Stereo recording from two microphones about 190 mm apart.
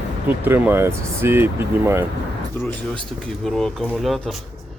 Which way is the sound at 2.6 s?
10° left (ahead or behind).